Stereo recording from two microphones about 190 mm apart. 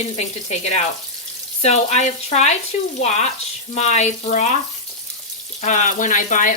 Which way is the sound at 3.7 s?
35° left (ahead or behind).